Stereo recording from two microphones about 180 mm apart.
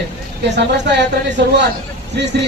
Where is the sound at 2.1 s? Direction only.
70° right (ahead or behind).